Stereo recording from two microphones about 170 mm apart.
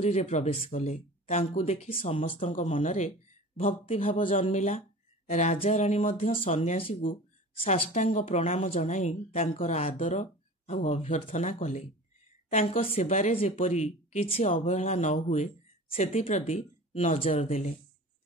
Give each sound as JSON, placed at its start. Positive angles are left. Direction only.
{"t": 0.0, "sound": "speech", "side_deg": 40}
{"t": 2.3, "sound": "a woman's voice", "side_deg": 50}